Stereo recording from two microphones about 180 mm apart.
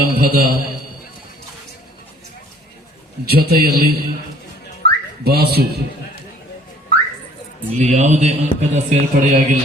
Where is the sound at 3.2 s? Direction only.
60° right (ahead or behind).